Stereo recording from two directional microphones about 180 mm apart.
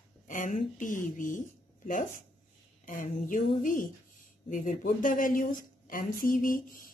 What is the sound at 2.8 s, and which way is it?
Speech, 45° left (ahead or behind).